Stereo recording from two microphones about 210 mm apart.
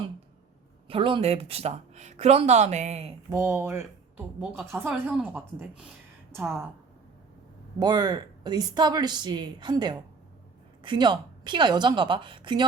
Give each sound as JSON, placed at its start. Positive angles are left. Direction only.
{"t": 0.9, "sound": "speech", "side_deg": -25}
{"t": 3.2, "sound": "speech", "side_deg": -15}
{"t": 7.8, "sound": "speech", "side_deg": -20}